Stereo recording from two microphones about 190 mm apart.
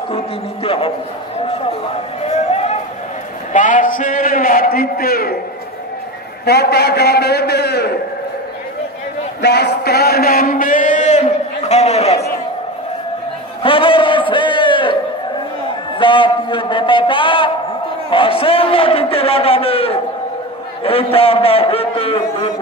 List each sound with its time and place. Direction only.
0.7 s a man's voice: 30° left (ahead or behind)
2.2 s a sound: 35° left (ahead or behind)
3.5 s a man's voice: 40° left (ahead or behind)
6.4 s a man's voice: 60° left (ahead or behind)
9.4 s a man's voice: 60° left (ahead or behind); by 12.2 s 35° left (ahead or behind)
13.6 s a sound: 25° left (ahead or behind)
16.0 s a man's voice: 25° left (ahead or behind)